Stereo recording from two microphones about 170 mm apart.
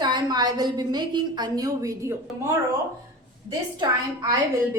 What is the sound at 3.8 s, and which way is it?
A woman's voice, 20° right (ahead or behind).